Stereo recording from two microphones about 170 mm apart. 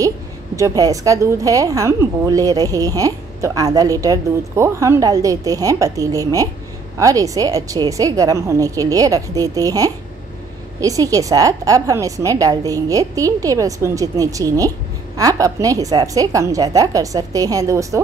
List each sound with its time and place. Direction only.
0.6 s a woman's voice: 20° right (ahead or behind)